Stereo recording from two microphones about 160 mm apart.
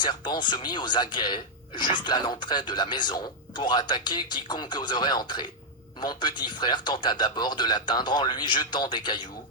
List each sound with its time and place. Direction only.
0.0 s speech: 30° left (ahead or behind)